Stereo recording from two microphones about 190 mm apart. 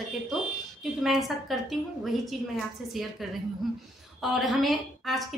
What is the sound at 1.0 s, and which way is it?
A woman's voice, centre (ahead or behind).